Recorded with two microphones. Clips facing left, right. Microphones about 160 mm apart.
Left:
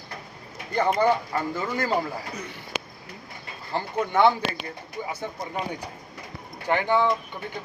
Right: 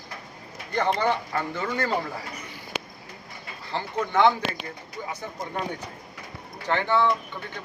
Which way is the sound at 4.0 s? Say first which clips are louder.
Left 1 dB; 10° left (ahead or behind).